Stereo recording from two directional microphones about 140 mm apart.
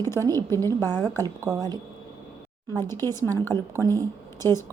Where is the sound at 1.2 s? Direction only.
30° right (ahead or behind).